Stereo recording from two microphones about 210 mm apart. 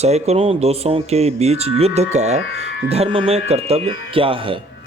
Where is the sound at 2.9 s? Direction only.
30° right (ahead or behind).